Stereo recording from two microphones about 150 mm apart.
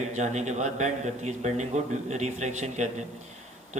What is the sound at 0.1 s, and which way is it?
A man's voice, 50° right (ahead or behind).